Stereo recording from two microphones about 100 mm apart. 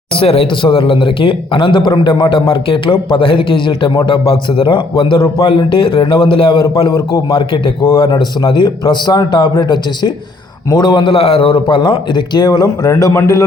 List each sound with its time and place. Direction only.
0.1 s a man's voice: 70° left (ahead or behind)
8.1 s a man's voice: 45° left (ahead or behind)